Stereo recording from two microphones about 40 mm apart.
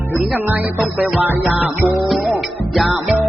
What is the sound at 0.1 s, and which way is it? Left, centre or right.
Music, right.